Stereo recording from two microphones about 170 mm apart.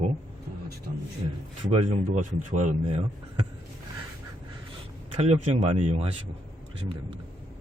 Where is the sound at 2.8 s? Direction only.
30° right (ahead or behind).